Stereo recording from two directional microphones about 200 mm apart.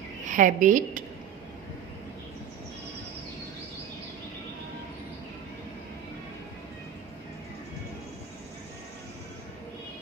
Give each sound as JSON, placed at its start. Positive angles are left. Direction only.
{"t": 0.3, "sound": "a woman's voice", "side_deg": -40}